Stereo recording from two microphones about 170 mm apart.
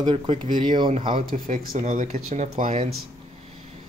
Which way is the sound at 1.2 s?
55° right (ahead or behind).